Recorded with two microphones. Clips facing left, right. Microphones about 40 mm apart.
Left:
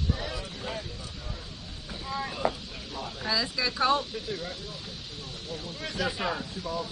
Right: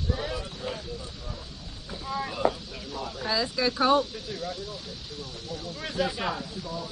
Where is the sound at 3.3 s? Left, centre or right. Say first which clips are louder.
Right 2 dB; right.